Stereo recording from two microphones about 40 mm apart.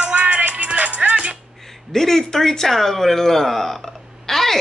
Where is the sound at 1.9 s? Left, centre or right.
Centre.